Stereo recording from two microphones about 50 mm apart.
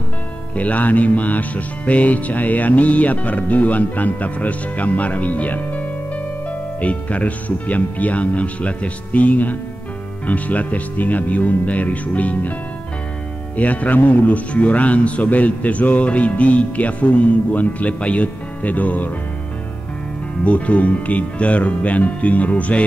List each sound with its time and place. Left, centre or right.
0.6 s a man's voice: left
13.6 s a man's voice: left
20.4 s a man's voice: left